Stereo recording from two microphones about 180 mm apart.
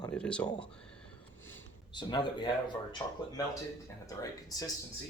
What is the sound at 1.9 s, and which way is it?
Speech, 25° left (ahead or behind).